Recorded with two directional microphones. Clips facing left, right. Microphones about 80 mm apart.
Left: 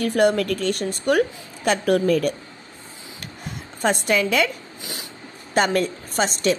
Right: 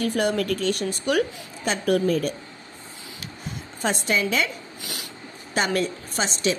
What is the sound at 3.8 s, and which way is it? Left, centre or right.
Speech, left.